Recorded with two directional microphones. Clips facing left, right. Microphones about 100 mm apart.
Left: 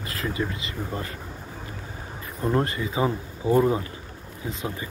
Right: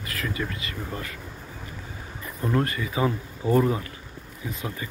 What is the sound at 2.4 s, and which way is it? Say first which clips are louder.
Speech: left 1 dB; 25° left (ahead or behind).